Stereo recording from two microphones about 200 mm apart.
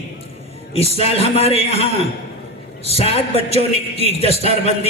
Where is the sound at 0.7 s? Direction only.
30° left (ahead or behind).